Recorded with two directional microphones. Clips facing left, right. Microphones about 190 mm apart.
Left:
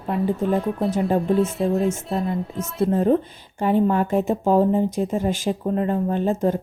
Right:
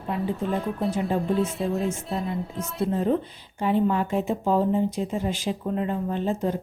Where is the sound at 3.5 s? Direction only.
50° left (ahead or behind).